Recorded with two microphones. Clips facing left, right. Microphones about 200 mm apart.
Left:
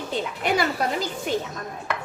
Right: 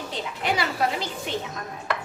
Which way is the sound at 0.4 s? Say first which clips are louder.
Left 1 dB; 50° left (ahead or behind).